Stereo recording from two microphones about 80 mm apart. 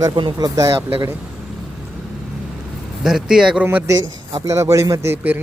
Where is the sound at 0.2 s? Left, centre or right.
Right.